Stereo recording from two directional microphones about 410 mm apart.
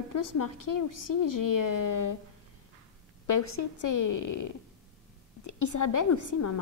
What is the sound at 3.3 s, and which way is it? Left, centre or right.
A woman's voice, left.